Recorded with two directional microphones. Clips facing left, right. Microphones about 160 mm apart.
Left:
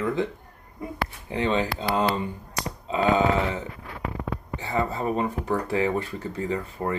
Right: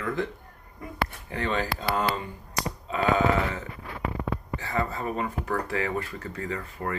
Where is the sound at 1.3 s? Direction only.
25° left (ahead or behind).